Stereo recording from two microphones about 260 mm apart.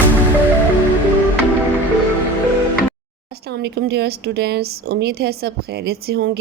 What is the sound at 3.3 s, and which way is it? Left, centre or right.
Speech, right.